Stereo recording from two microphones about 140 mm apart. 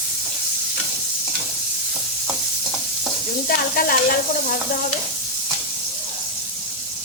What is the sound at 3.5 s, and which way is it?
Stir, 90° left.